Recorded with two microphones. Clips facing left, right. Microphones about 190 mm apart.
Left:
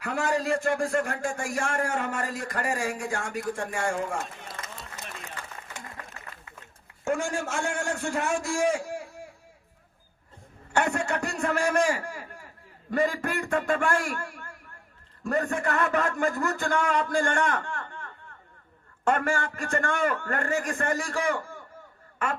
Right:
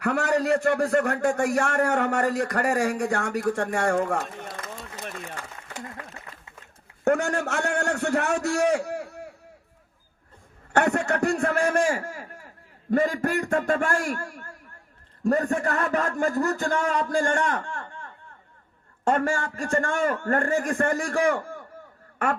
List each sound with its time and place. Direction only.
0.0 s a man's voice: 65° right (ahead or behind)
3.8 s a sound: 65° right (ahead or behind)
7.0 s a man's voice: 65° right (ahead or behind)
10.7 s a man's voice: 60° right (ahead or behind); by 17.6 s 40° right (ahead or behind)
19.1 s a man's voice: 40° right (ahead or behind); by 21.5 s 60° right (ahead or behind)